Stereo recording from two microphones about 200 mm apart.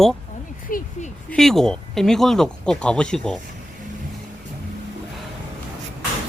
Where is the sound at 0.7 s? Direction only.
45° left (ahead or behind).